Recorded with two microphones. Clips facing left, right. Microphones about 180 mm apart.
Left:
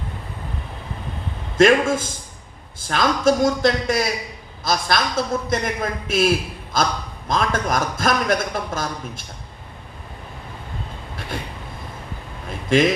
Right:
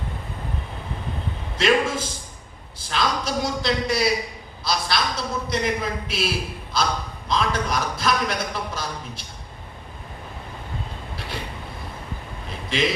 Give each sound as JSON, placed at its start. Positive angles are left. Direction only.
{"t": 1.5, "sound": "a man's voice", "side_deg": 50}
{"t": 12.7, "sound": "a man's voice", "side_deg": 50}